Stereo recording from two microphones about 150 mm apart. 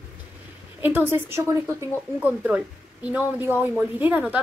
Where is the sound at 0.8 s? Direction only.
15° right (ahead or behind).